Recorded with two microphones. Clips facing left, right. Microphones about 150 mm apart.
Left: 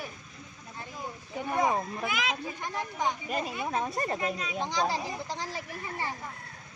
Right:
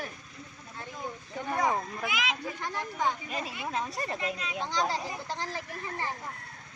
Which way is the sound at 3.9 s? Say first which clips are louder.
Left 3 dB; 40° left (ahead or behind).